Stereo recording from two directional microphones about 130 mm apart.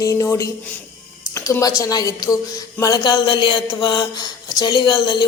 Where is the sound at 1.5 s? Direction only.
25° left (ahead or behind).